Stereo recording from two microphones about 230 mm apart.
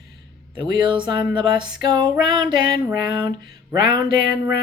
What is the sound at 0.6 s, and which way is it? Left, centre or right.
Speech, right.